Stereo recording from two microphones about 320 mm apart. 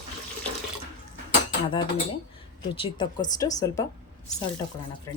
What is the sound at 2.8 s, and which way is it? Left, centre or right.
Speech, centre.